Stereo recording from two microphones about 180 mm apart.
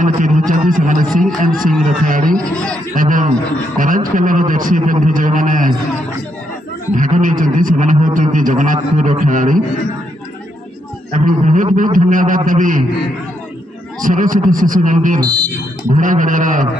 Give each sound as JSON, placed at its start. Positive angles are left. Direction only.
{"t": 0.0, "sound": "a man's voice", "side_deg": -45}
{"t": 1.5, "sound": "speech", "side_deg": 0}
{"t": 1.9, "sound": "a man's voice", "side_deg": -50}
{"t": 2.3, "sound": "speech", "side_deg": 5}
{"t": 2.9, "sound": "a man's voice", "side_deg": -50}
{"t": 7.0, "sound": "a man's voice", "side_deg": -45}
{"t": 11.1, "sound": "a man's voice", "side_deg": -45}
{"t": 14.0, "sound": "a man's voice", "side_deg": -50}